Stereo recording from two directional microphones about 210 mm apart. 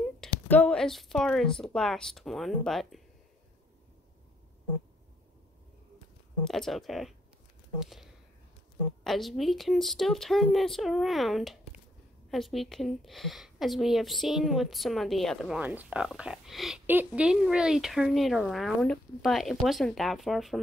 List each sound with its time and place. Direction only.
0.2 s a woman's voice: 5° left (ahead or behind)
6.4 s a woman's voice: centre (ahead or behind)